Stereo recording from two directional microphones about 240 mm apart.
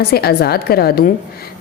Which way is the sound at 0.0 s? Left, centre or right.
Left.